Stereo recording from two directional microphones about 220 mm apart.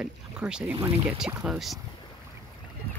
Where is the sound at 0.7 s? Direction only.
25° right (ahead or behind).